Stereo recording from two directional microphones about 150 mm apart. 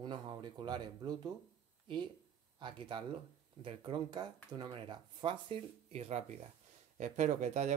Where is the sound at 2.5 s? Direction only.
30° right (ahead or behind).